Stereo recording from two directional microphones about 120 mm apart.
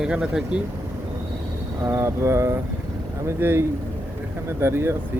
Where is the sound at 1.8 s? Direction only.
25° right (ahead or behind).